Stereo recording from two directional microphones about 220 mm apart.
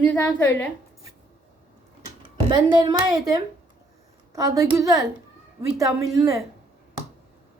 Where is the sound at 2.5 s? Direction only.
20° right (ahead or behind).